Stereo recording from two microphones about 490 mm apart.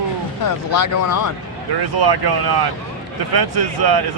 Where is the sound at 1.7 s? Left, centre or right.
Right.